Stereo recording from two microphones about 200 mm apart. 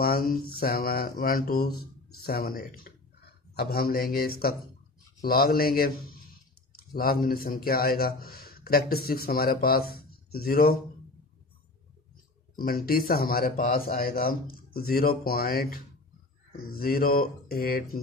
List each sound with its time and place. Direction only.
0.0 s a man's voice: 50° left (ahead or behind)
12.5 s a man's voice: 50° left (ahead or behind)